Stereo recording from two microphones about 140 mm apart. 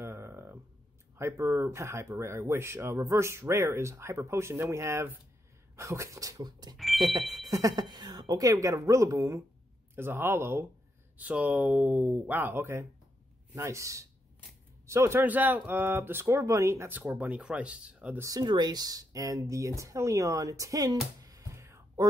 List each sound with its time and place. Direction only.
0.0 s a sound: 20° right (ahead or behind)
1.1 s speech: 20° right (ahead or behind)
6.8 s speech: centre (ahead or behind)
7.4 s speech: 25° right (ahead or behind)
17.0 s speech: 5° right (ahead or behind)
18.2 s speech: 30° right (ahead or behind)
21.2 s music: 25° right (ahead or behind)